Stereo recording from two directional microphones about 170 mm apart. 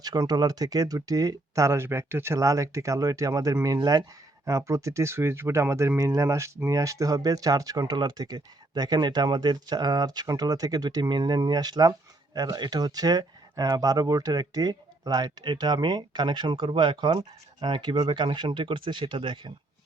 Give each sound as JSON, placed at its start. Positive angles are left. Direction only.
{"t": 0.0, "sound": "speech", "side_deg": -25}